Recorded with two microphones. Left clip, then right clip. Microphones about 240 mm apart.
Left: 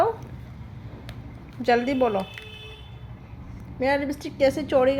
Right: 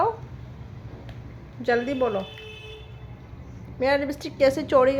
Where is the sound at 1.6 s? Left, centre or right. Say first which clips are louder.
Left 2 dB; centre.